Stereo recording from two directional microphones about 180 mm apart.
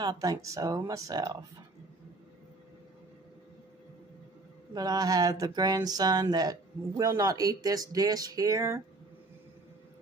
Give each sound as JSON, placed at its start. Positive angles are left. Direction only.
{"t": 0.0, "sound": "speech", "side_deg": -20}
{"t": 4.7, "sound": "speech", "side_deg": -20}